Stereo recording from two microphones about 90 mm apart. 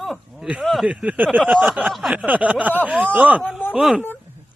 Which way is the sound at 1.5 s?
Centre (ahead or behind).